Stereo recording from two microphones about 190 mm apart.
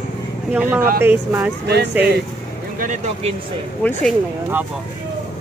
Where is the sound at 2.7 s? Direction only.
40° right (ahead or behind).